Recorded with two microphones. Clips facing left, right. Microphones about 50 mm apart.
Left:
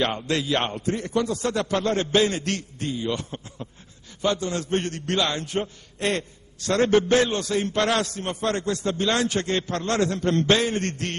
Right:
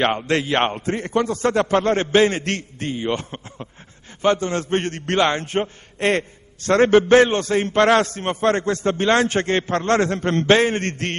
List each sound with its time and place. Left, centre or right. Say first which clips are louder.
0.0 s a man's voice: right 5 dB; right